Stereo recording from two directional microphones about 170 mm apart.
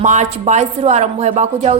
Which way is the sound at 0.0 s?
45° right (ahead or behind).